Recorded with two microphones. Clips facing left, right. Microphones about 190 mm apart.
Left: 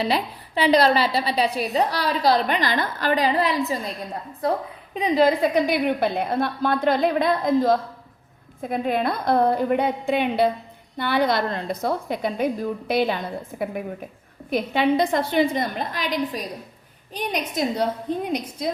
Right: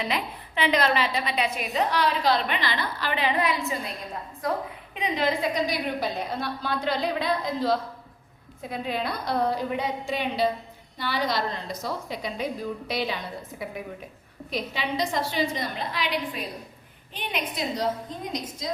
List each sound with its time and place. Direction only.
0.0 s a woman's voice: 35° left (ahead or behind)
5.4 s a woman's voice: 60° left (ahead or behind)